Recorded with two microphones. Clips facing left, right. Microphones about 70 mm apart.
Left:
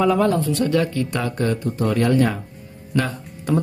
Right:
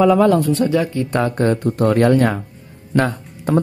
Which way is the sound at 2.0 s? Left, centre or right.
Right.